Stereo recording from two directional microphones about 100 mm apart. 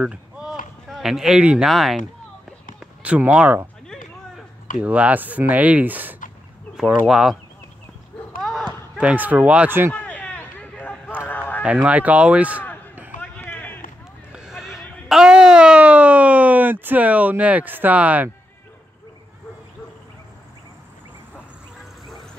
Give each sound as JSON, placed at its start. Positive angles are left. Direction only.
{"t": 0.0, "sound": "run", "side_deg": -10}
{"t": 1.7, "sound": "speech", "side_deg": 0}
{"t": 2.8, "sound": "speech", "side_deg": -10}
{"t": 4.7, "sound": "speech", "side_deg": -15}
{"t": 7.1, "sound": "speech", "side_deg": -5}
{"t": 8.4, "sound": "a sound", "side_deg": 0}
{"t": 9.0, "sound": "speech", "side_deg": -15}
{"t": 9.9, "sound": "a sound", "side_deg": 15}
{"t": 11.6, "sound": "speech", "side_deg": -15}
{"t": 13.2, "sound": "run", "side_deg": 20}
{"t": 14.3, "sound": "a sound", "side_deg": -5}